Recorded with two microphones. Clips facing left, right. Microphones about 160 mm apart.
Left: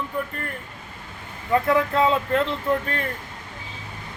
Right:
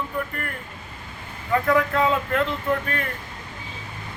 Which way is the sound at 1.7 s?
25° left (ahead or behind).